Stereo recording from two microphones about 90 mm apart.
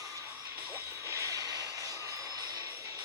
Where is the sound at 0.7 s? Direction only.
30° right (ahead or behind); by 2.7 s 45° right (ahead or behind).